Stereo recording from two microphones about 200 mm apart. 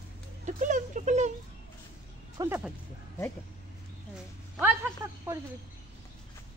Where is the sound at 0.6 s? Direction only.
40° right (ahead or behind).